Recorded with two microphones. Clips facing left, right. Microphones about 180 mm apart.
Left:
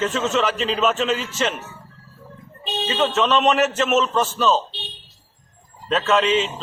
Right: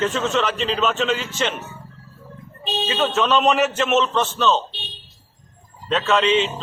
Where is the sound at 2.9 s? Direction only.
Centre (ahead or behind).